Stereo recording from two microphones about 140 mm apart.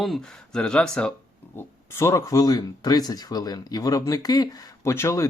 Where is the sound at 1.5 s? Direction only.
20° left (ahead or behind).